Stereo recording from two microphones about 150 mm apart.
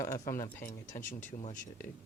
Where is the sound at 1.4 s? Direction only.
55° left (ahead or behind).